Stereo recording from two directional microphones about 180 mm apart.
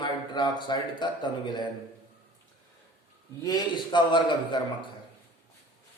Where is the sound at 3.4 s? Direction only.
25° left (ahead or behind).